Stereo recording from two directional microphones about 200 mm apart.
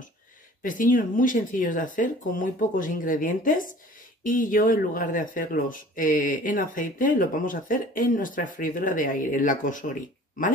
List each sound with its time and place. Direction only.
0.6 s speech: 40° left (ahead or behind)